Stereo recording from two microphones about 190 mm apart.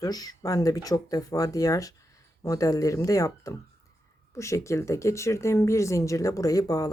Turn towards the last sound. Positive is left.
turn(degrees=20)  # may be behind; listen again after turning